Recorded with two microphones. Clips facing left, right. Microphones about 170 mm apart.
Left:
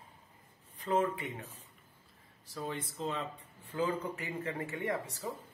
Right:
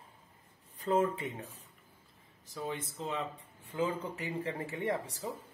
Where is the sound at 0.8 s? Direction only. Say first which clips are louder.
Right 2 dB; 25° right (ahead or behind).